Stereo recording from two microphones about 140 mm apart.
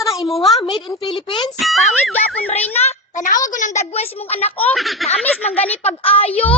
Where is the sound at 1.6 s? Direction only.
Centre (ahead or behind).